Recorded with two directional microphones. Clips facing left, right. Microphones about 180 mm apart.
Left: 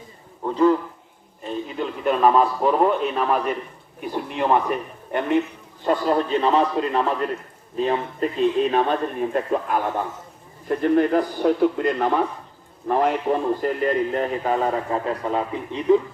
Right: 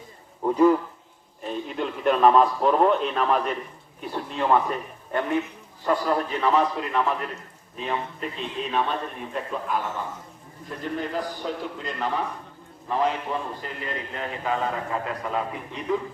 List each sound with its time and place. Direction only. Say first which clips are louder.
0.4 s a man's voice: even; 10° right (ahead or behind); by 7.0 s 30° left (ahead or behind)
7.8 s a man's voice: left 8 dB; 40° left (ahead or behind)
15.0 s a man's voice: left 4 dB; 30° left (ahead or behind)